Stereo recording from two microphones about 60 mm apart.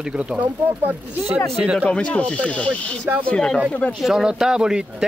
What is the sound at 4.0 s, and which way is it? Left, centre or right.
Speech, centre.